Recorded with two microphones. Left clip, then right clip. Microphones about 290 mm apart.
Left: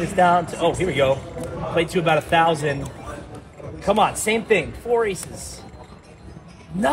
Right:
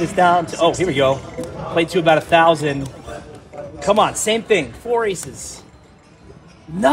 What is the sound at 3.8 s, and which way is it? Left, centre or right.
Speech, right.